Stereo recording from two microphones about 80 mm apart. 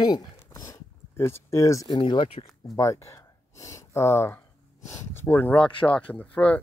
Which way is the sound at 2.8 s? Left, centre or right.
Left.